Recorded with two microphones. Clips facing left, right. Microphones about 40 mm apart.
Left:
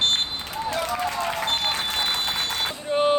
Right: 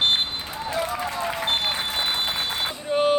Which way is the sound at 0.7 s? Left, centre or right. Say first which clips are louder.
Right 1 dB; left.